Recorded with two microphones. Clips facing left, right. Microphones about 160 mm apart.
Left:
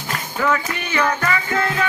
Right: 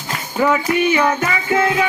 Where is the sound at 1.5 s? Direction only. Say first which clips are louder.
Right 9 dB; 20° right (ahead or behind).